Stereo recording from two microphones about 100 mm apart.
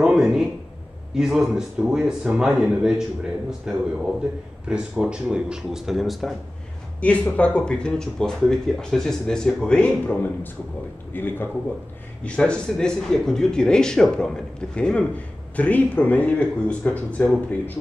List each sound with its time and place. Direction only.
0.0 s a sound: 5° right (ahead or behind)
1.1 s speech: 5° right (ahead or behind)
7.0 s a man's voice: 15° left (ahead or behind)